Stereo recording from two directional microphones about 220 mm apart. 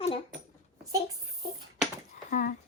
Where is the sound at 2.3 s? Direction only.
35° left (ahead or behind).